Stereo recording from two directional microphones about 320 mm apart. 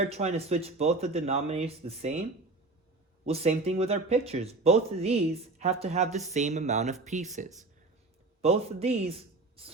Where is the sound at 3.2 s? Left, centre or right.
Centre.